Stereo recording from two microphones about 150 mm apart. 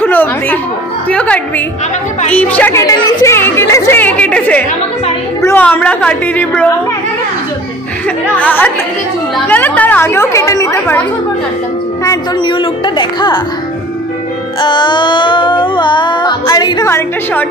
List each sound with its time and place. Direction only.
0.0 s a woman's voice: 10° left (ahead or behind)
2.8 s speech: 25° left (ahead or behind)
8.4 s speech: 10° left (ahead or behind)
12.0 s music: 25° left (ahead or behind)
14.6 s music: 30° left (ahead or behind)
16.9 s speech: 10° left (ahead or behind)